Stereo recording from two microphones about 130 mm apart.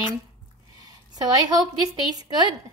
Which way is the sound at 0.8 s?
30° right (ahead or behind).